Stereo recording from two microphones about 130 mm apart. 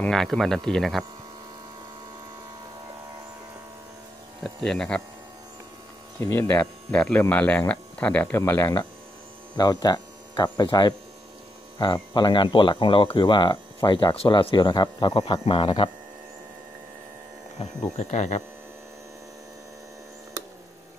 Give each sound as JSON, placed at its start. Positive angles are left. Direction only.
{"t": 0.0, "sound": "speech", "side_deg": 0}
{"t": 4.4, "sound": "speech", "side_deg": 5}
{"t": 6.1, "sound": "speech", "side_deg": 15}
{"t": 17.6, "sound": "speech", "side_deg": 50}
{"t": 17.9, "sound": "speech", "side_deg": 60}